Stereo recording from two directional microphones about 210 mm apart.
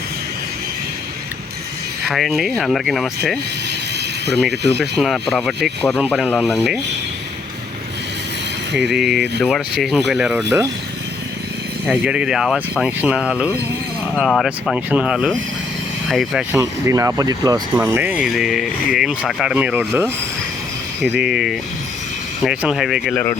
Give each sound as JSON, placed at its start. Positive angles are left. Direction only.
{"t": 2.0, "sound": "speech", "side_deg": 0}
{"t": 4.8, "sound": "speech", "side_deg": 0}
{"t": 8.7, "sound": "speech", "side_deg": 0}
{"t": 11.9, "sound": "speech", "side_deg": -5}
{"t": 16.6, "sound": "speech", "side_deg": -15}